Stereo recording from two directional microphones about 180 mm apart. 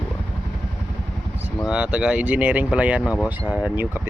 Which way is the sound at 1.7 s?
5° right (ahead or behind).